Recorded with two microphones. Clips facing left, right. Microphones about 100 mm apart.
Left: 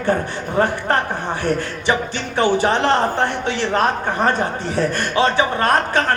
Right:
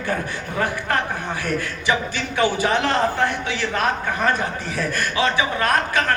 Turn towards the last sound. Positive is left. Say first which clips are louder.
# left 3 dB
turn(degrees=40)  # may be behind; listen again after turning